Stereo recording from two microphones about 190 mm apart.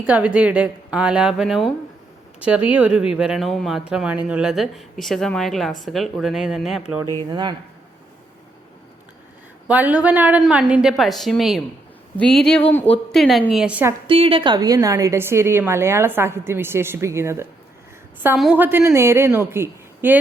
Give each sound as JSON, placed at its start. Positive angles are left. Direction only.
{"t": 0.0, "sound": "speech", "side_deg": -5}
{"t": 7.3, "sound": "speech", "side_deg": -25}
{"t": 9.6, "sound": "speech", "side_deg": -10}
{"t": 14.1, "sound": "a woman's voice", "side_deg": -30}